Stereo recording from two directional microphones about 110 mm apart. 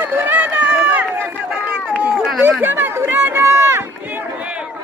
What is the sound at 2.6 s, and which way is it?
Speech, 20° right (ahead or behind).